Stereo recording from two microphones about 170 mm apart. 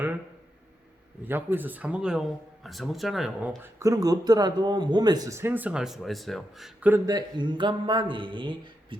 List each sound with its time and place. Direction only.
1.2 s speech: 10° right (ahead or behind)
7.0 s speech: 20° right (ahead or behind)